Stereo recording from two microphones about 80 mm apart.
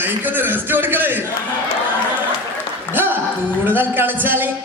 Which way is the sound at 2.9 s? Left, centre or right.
Right.